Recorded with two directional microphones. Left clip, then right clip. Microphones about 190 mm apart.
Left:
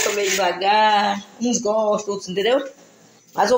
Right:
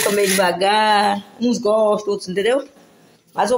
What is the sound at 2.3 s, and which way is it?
Speech, 15° right (ahead or behind).